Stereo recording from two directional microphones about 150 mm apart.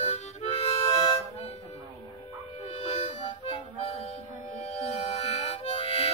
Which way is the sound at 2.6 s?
45° left (ahead or behind).